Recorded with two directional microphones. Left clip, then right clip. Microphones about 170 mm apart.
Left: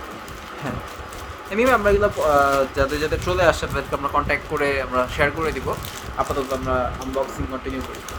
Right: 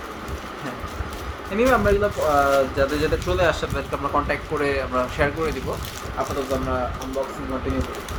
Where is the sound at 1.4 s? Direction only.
55° left (ahead or behind).